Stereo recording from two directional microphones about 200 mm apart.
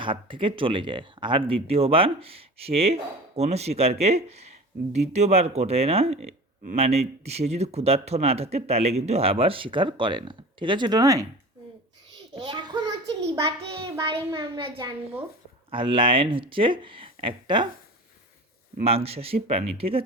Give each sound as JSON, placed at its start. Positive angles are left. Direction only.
{"t": 0.0, "sound": "speech", "side_deg": -25}
{"t": 12.3, "sound": "a sound", "side_deg": -20}
{"t": 13.6, "sound": "speech", "side_deg": -30}
{"t": 18.9, "sound": "speech", "side_deg": -30}